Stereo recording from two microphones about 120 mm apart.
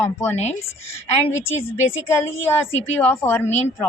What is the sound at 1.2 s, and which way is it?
Speech, 20° left (ahead or behind).